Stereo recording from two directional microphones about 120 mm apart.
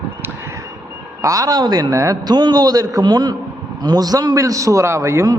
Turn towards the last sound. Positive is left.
turn(degrees=-25)  # may be behind; listen again after turning